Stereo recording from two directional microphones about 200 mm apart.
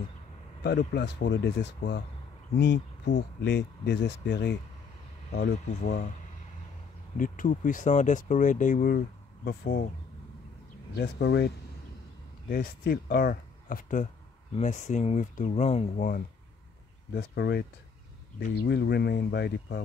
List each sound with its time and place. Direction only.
0.7 s speech: 60° left (ahead or behind)
5.3 s speech: 40° left (ahead or behind)
7.2 s speech: 40° left (ahead or behind)
11.0 s speech: 55° left (ahead or behind); by 16.2 s 40° left (ahead or behind)
17.1 s speech: 55° left (ahead or behind)